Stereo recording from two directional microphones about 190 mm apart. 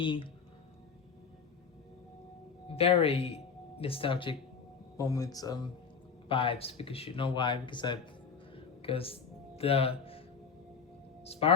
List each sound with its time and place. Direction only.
0.0 s speech: 25° left (ahead or behind)
2.6 s speech: 30° left (ahead or behind)
8.5 s music: 30° left (ahead or behind)
9.6 s speech: 30° left (ahead or behind)